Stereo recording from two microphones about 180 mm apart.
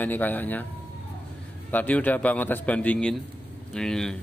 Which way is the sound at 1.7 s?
10° left (ahead or behind).